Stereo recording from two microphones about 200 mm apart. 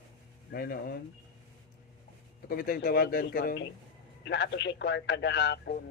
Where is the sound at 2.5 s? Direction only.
45° left (ahead or behind).